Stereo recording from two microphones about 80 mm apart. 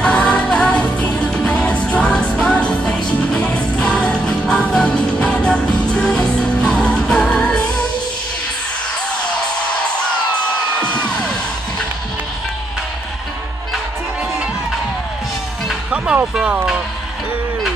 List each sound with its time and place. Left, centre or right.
0.0 s music: centre